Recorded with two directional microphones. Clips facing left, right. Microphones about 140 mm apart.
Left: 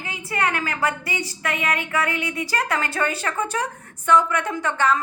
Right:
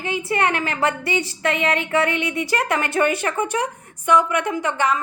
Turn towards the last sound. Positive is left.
turn(degrees=-15)  # may be behind; listen again after turning